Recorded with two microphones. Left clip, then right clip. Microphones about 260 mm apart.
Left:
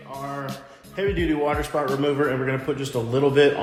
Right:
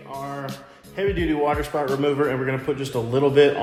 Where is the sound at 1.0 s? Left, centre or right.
Right.